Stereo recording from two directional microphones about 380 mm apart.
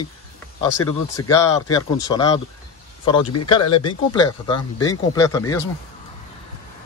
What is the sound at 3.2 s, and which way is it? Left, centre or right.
Speech, left.